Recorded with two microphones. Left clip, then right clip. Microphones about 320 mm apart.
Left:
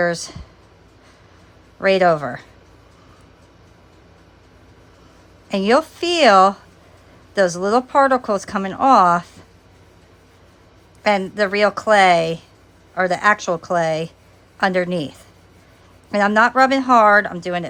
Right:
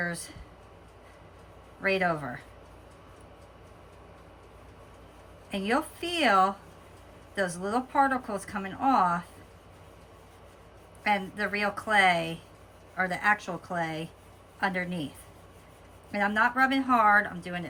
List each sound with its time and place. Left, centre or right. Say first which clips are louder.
0.0 s speech: left 14 dB; centre
1.8 s speech: left 13 dB; centre
5.5 s speech: left 13 dB; centre
11.0 s speech: left 11 dB; centre
16.1 s speech: left 11 dB; centre